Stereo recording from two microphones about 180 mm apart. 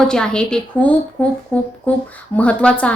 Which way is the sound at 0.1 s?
5° left (ahead or behind).